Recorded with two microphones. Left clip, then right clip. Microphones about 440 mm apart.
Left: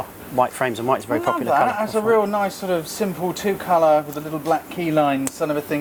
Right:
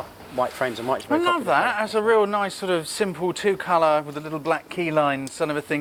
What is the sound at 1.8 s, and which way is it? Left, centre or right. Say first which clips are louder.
Speech: left 1 dB; right.